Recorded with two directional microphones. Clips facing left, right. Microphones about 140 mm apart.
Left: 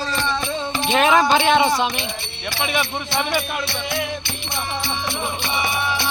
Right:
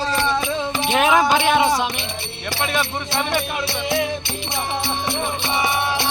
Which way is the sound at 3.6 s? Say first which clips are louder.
Right 4 dB; 30° right (ahead or behind).